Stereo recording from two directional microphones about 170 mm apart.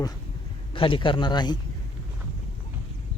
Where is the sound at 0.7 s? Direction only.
30° left (ahead or behind).